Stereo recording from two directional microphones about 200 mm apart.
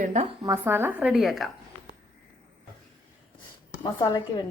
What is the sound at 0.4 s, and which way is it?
A woman's voice, 15° right (ahead or behind).